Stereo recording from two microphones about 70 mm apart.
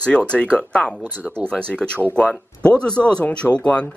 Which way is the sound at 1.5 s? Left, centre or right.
Centre.